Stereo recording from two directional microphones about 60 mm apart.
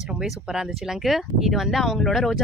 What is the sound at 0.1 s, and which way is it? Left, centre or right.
Speech, centre.